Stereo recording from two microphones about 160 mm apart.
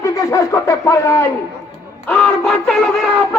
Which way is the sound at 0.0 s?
20° left (ahead or behind).